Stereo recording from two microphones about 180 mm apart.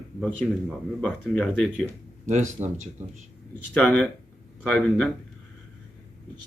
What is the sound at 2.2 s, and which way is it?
Speech, 40° right (ahead or behind).